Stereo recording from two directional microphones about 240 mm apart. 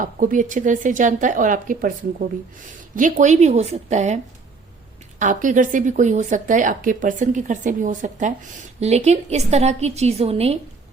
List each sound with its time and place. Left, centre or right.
0.0 s speech: right
5.2 s a woman's voice: right